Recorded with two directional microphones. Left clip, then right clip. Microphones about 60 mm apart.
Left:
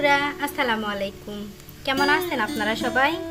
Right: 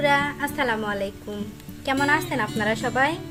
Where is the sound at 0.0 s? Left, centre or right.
Right.